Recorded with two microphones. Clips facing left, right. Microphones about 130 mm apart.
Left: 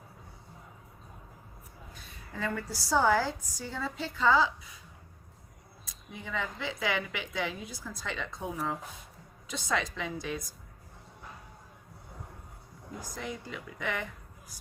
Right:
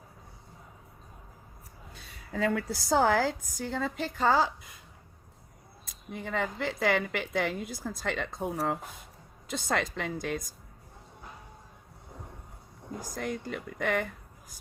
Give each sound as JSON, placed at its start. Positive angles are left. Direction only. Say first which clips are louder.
{"t": 2.0, "sound": "speech", "louder": "right 6 dB", "side_deg": -70}
{"t": 5.8, "sound": "speech", "louder": "right 5 dB", "side_deg": -55}
{"t": 13.0, "sound": "speech", "louder": "right 4 dB", "side_deg": -50}